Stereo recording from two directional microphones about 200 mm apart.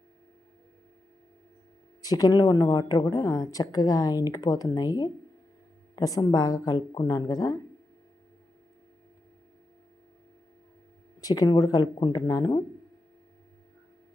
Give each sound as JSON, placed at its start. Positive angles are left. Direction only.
{"t": 2.0, "sound": "speech", "side_deg": 20}
{"t": 11.2, "sound": "speech", "side_deg": 20}